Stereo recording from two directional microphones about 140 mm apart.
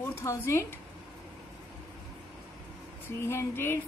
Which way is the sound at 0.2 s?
20° left (ahead or behind).